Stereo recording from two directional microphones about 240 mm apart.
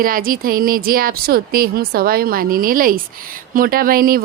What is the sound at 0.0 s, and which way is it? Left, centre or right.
Speech, right.